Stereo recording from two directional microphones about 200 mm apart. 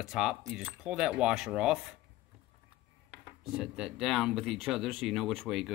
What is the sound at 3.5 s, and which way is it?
Speech, 5° right (ahead or behind).